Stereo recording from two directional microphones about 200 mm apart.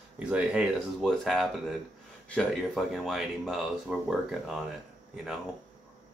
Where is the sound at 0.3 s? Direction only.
5° right (ahead or behind).